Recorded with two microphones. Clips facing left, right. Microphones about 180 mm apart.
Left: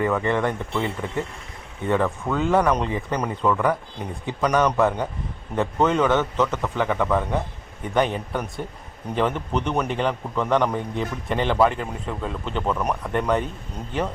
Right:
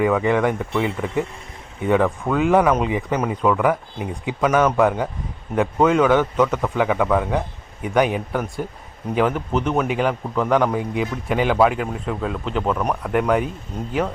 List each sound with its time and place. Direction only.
0.0 s a man's voice: 10° right (ahead or behind)